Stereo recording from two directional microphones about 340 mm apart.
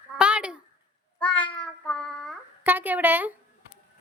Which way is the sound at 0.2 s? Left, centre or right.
Centre.